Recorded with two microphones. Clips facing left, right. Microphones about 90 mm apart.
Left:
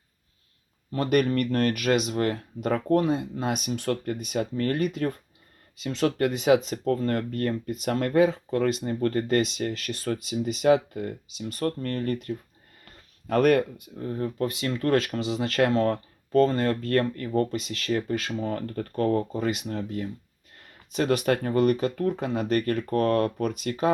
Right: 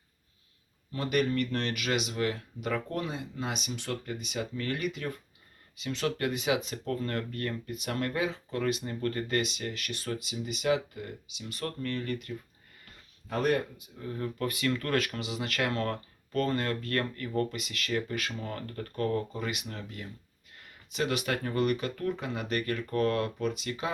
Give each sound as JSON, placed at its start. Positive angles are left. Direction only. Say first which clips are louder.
{"t": 0.9, "sound": "speech", "louder": "left 5 dB", "side_deg": 50}
{"t": 13.2, "sound": "speech", "louder": "left 8 dB", "side_deg": 60}
{"t": 14.0, "sound": "speech", "louder": "left 5 dB", "side_deg": 35}